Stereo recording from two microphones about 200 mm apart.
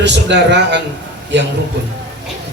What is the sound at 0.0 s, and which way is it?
A man's voice, 60° right (ahead or behind).